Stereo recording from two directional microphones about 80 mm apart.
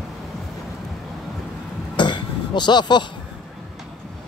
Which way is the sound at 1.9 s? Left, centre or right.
Left.